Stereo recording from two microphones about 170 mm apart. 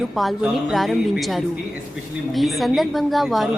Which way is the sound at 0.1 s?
Centre (ahead or behind).